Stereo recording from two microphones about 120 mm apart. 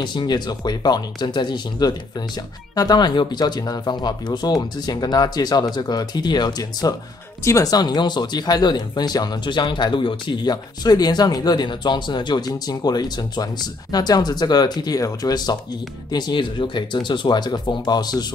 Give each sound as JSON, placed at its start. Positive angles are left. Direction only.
{"t": 0.0, "sound": "speech", "side_deg": 40}